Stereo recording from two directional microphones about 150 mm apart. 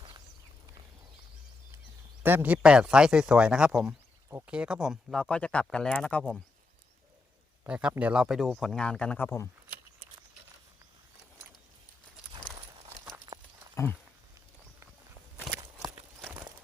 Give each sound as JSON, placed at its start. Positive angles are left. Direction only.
{"t": 2.2, "sound": "speech", "side_deg": -10}
{"t": 7.6, "sound": "speech", "side_deg": -5}
{"t": 13.2, "sound": "horse", "side_deg": -30}
{"t": 15.5, "sound": "walk", "side_deg": 0}